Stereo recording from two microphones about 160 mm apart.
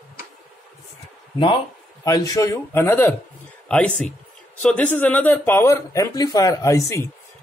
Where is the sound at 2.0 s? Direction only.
20° left (ahead or behind).